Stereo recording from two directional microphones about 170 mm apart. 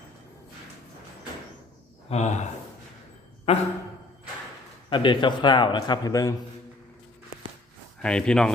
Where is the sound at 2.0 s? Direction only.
40° left (ahead or behind).